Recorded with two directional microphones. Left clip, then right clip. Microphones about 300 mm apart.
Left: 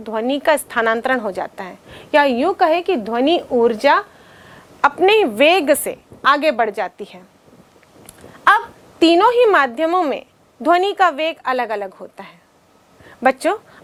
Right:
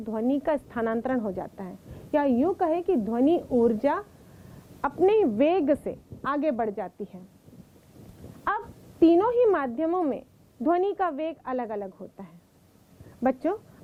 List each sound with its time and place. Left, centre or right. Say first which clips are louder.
0.0 s a woman's voice: left 9 dB; centre
3.4 s speech: left 8 dB; centre
3.7 s a woman's voice: left 11 dB; centre
8.4 s a woman's voice: left 16 dB; centre